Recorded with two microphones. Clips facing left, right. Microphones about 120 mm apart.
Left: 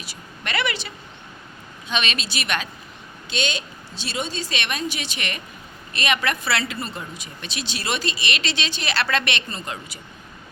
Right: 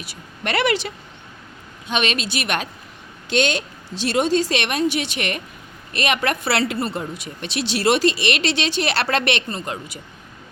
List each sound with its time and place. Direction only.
0.0 s speech: 60° right (ahead or behind)
1.9 s a woman's voice: 55° right (ahead or behind)
3.2 s speech: 70° right (ahead or behind)
4.0 s speech: 90° right; by 10.0 s 55° right (ahead or behind)